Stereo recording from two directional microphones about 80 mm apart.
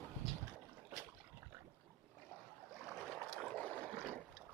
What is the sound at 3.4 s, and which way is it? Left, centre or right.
Boat, centre.